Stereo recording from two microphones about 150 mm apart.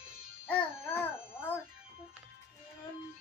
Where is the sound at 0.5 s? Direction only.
15° left (ahead or behind).